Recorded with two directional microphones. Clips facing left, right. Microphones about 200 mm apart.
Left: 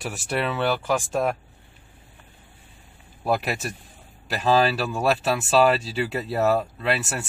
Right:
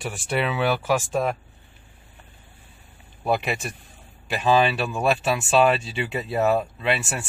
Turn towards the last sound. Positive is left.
turn(degrees=0)  # may be behind; listen again after turning